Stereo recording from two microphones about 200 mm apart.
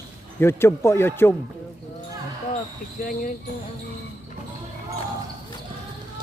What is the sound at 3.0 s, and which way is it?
Speech, 45° left (ahead or behind).